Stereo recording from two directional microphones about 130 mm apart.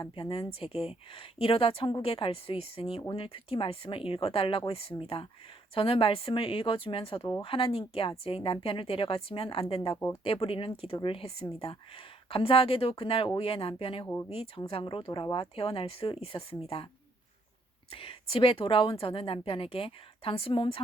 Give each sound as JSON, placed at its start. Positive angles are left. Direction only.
{"t": 0.0, "sound": "a woman's voice", "side_deg": 40}
{"t": 9.9, "sound": "speech", "side_deg": 25}
{"t": 10.2, "sound": "a woman's voice", "side_deg": 45}
{"t": 17.9, "sound": "a woman's voice", "side_deg": 45}